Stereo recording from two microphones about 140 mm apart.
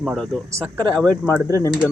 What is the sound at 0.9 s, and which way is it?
Speech, 10° left (ahead or behind).